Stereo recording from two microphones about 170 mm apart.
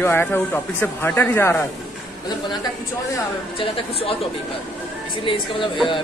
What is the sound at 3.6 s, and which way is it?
Speech, 35° left (ahead or behind).